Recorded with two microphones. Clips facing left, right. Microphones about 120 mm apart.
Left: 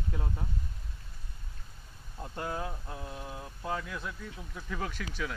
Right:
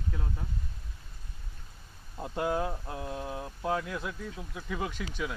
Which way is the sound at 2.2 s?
15° right (ahead or behind).